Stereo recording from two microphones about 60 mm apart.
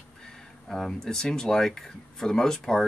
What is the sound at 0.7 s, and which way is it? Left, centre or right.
Speech, centre.